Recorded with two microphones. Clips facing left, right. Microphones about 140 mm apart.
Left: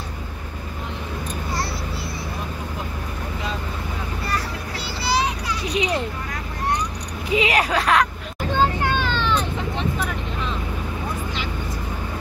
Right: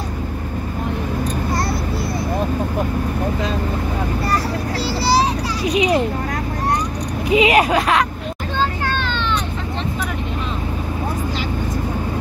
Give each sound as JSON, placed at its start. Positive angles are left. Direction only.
{"t": 5.0, "sound": "child singing", "side_deg": -35}
{"t": 5.8, "sound": "a sound", "side_deg": -15}
{"t": 7.3, "sound": "speech", "side_deg": -15}
{"t": 8.5, "sound": "vehicle", "side_deg": 10}